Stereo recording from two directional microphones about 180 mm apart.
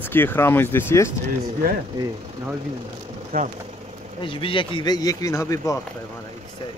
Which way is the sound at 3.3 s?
50° right (ahead or behind).